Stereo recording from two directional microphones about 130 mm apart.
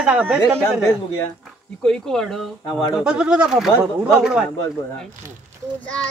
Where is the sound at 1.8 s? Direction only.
5° left (ahead or behind).